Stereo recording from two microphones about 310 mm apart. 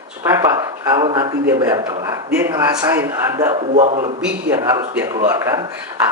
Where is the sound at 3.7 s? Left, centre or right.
Right.